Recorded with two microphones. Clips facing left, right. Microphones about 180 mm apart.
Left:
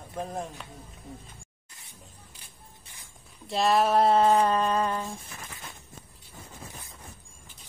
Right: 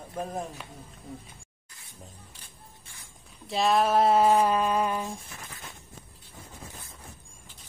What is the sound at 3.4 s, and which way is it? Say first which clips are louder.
Speech: even; centre (ahead or behind).